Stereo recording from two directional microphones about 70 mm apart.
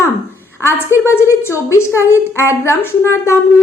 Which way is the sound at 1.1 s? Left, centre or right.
Left.